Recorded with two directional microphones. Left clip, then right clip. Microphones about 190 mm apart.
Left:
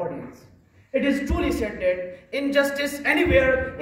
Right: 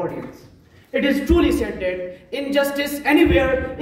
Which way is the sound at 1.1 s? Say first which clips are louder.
Right 6 dB; 20° left (ahead or behind).